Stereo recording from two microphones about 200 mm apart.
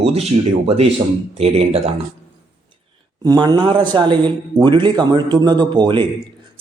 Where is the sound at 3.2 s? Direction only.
20° right (ahead or behind).